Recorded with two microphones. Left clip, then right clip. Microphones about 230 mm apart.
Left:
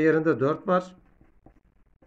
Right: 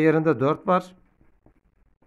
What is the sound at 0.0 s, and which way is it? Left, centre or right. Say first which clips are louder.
Speech: right 2 dB; right.